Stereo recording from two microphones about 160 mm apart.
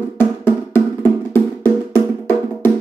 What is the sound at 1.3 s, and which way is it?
Music, 15° left (ahead or behind).